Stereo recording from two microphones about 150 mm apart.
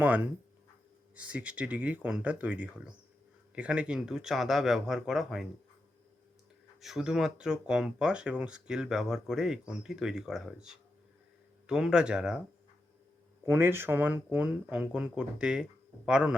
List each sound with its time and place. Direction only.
0.0 s speech: 10° right (ahead or behind)
6.8 s speech: 5° right (ahead or behind)
13.4 s speech: 15° right (ahead or behind)